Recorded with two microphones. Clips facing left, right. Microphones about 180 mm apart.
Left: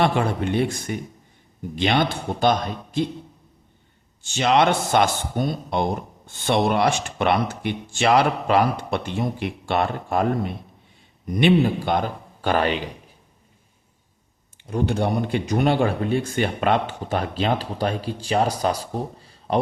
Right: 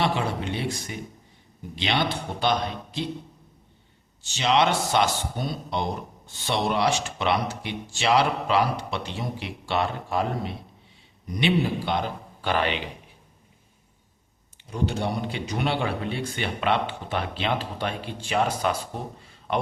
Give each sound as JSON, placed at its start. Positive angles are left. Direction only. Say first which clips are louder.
{"t": 0.0, "sound": "speech", "louder": "left 5 dB", "side_deg": 50}
{"t": 4.2, "sound": "speech", "louder": "left 3 dB", "side_deg": 50}
{"t": 14.7, "sound": "speech", "louder": "left 5 dB", "side_deg": 55}